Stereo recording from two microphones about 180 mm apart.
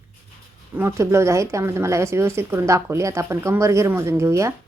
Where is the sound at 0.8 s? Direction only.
15° right (ahead or behind).